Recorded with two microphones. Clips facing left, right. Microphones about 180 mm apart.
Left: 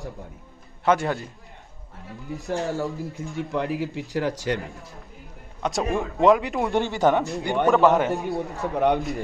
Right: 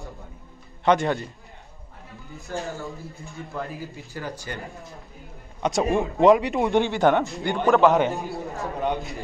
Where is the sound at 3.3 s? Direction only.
80° left.